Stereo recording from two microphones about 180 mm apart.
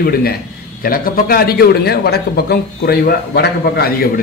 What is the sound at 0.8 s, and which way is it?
A man's voice, 55° left (ahead or behind).